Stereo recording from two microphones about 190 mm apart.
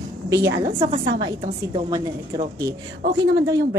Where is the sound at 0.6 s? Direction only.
35° right (ahead or behind).